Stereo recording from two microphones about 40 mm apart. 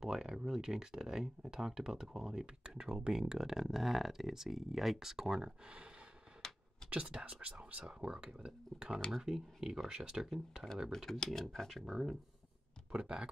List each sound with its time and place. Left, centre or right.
0.0 s a sound: centre
0.5 s speech: centre
6.4 s a sound: centre
6.9 s speech: right
7.8 s speech: centre
11.1 s speech: centre
11.9 s speech: centre
12.9 s speech: right